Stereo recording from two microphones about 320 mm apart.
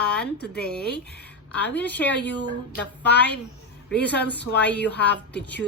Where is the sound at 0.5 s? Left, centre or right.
Centre.